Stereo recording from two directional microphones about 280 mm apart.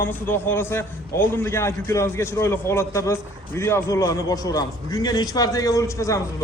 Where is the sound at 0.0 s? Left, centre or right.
Centre.